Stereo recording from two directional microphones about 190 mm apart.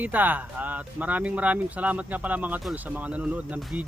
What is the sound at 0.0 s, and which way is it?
Speech, 10° right (ahead or behind).